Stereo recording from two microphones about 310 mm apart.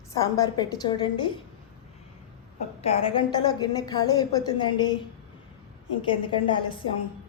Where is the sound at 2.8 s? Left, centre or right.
Centre.